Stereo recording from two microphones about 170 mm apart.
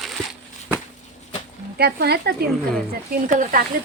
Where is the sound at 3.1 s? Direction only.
55° right (ahead or behind).